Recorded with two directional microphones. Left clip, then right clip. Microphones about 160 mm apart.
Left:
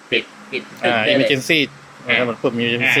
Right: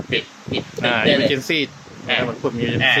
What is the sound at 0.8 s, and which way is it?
Speech, centre (ahead or behind).